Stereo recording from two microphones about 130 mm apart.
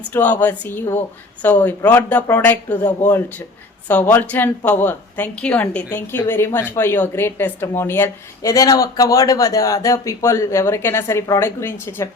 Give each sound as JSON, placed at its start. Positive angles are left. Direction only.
{"t": 0.1, "sound": "a woman's voice", "side_deg": 15}